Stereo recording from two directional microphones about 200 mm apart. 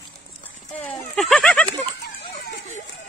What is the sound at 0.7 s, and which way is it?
Speech, 5° left (ahead or behind).